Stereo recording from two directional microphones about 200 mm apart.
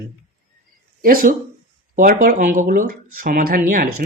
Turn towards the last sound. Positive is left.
turn(degrees=-45)  # may be behind; listen again after turning